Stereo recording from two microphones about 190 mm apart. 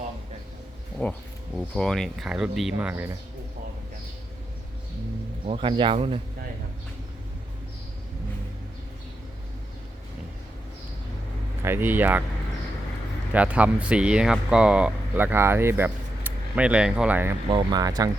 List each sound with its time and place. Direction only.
1.0 s speech: 5° left (ahead or behind); by 3.2 s 10° right (ahead or behind)
5.5 s speech: 25° right (ahead or behind)
11.6 s speech: 10° right (ahead or behind)
13.3 s speech: 5° right (ahead or behind)
17.5 s speech: 25° right (ahead or behind)